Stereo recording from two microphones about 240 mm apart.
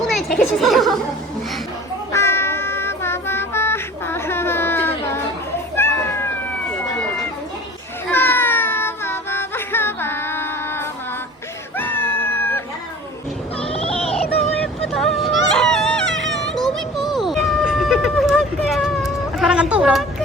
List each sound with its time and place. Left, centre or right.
0.0 s speech: centre
2.1 s child singing: centre
5.7 s cat: centre
8.1 s child singing: centre
11.8 s a sound: centre
13.6 s a sound: left
14.3 s vehicle: centre
14.9 s baby cry: centre
17.0 s a sound: centre